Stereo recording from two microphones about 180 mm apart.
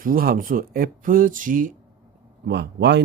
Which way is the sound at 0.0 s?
55° right (ahead or behind).